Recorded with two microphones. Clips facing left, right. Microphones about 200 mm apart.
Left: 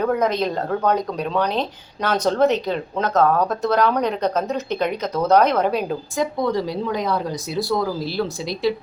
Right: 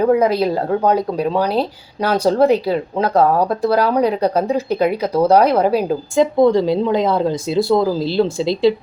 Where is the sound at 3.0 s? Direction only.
35° right (ahead or behind).